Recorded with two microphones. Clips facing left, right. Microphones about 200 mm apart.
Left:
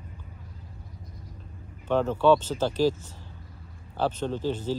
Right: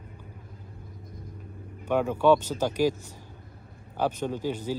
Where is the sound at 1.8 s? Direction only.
10° right (ahead or behind).